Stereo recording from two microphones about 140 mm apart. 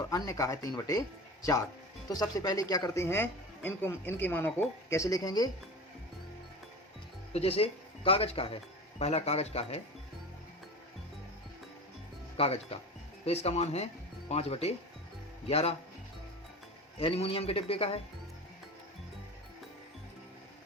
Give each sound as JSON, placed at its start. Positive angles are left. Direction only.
{"t": 0.0, "sound": "speech", "side_deg": 25}
{"t": 2.0, "sound": "speech", "side_deg": 25}
{"t": 3.0, "sound": "speech", "side_deg": 15}
{"t": 7.3, "sound": "speech", "side_deg": 45}
{"t": 12.4, "sound": "speech", "side_deg": 45}
{"t": 17.0, "sound": "speech", "side_deg": 45}